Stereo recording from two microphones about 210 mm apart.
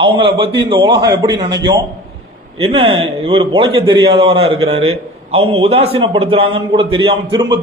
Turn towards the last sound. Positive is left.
turn(degrees=-20)  # may be behind; listen again after turning